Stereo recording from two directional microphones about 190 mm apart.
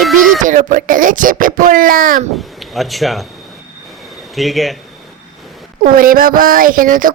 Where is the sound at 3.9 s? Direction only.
Centre (ahead or behind).